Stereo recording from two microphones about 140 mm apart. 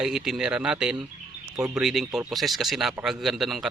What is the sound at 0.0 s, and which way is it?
A man's voice, 5° right (ahead or behind).